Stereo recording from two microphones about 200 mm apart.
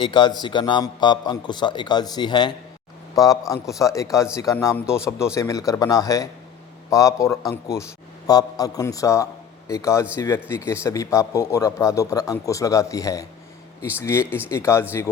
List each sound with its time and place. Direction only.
0.0 s a man's voice: 25° left (ahead or behind)